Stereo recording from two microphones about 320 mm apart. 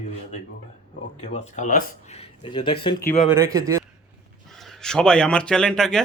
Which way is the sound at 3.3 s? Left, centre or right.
Centre.